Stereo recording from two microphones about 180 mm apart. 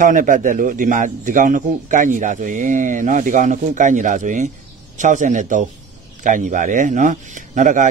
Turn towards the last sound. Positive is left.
turn(degrees=-45)  # may be behind; listen again after turning